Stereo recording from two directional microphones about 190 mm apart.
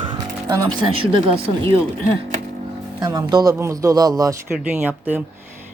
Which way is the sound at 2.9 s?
20° right (ahead or behind).